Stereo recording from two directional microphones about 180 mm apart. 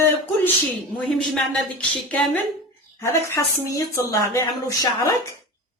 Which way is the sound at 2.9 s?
15° left (ahead or behind).